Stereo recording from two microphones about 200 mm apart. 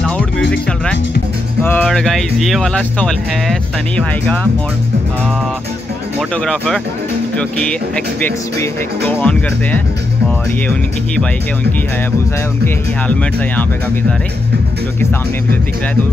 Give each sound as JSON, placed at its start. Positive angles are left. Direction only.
{"t": 0.5, "sound": "speech", "side_deg": 5}
{"t": 6.3, "sound": "speech", "side_deg": 5}